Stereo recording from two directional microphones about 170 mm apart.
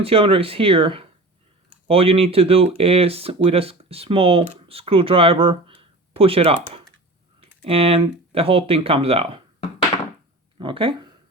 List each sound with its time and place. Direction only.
0.0 s speech: 35° right (ahead or behind)
10.6 s speech: 30° right (ahead or behind)